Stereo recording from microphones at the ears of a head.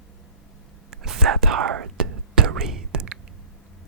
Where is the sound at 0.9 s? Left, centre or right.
Right.